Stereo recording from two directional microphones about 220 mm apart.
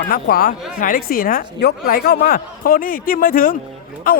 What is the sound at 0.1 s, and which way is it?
A woman's voice, 40° left (ahead or behind).